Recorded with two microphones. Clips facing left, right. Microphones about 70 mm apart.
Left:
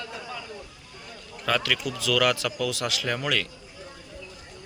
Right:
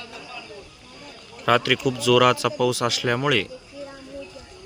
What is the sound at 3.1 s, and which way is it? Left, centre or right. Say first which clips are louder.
Speech: right 6 dB; right.